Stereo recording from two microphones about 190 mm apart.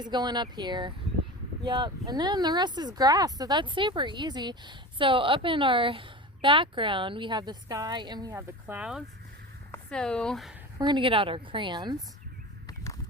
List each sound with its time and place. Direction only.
0.0 s speech: 20° right (ahead or behind); by 10.5 s centre (ahead or behind)
10.8 s speech: 25° right (ahead or behind)
12.6 s a sound: 15° left (ahead or behind)